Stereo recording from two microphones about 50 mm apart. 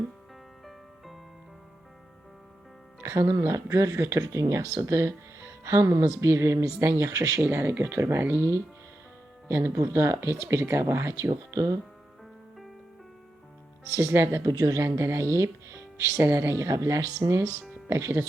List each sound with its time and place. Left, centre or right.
0.6 s music: centre
3.0 s speech: right
6.3 s speech: right
7.1 s speech: right
7.6 s speech: right
9.5 s speech: right
9.7 s speech: right
10.6 s speech: right
13.8 s speech: right
16.6 s speech: right